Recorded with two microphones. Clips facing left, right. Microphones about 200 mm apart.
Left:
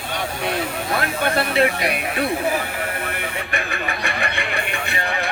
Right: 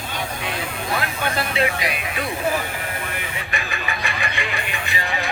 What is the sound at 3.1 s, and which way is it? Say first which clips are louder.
Vehicle: left 3 dB; 55° left (ahead or behind).